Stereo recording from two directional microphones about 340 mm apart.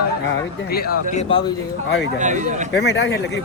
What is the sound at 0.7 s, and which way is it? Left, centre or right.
Speech, left.